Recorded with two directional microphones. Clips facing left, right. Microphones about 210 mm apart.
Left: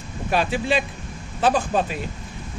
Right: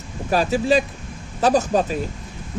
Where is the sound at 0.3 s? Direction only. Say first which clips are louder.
Right 4 dB; 40° right (ahead or behind).